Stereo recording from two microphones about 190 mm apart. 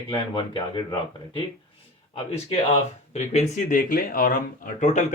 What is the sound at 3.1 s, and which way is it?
Speech, 35° left (ahead or behind).